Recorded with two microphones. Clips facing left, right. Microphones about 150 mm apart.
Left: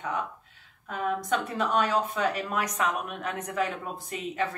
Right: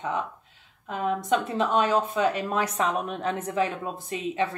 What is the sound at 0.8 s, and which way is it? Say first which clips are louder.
Speech: right 3 dB; 25° right (ahead or behind).